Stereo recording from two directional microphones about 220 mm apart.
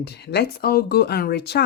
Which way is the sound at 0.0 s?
50° left (ahead or behind).